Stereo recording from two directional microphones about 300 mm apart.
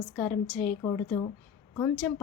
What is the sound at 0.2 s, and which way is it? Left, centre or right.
A woman's voice, centre.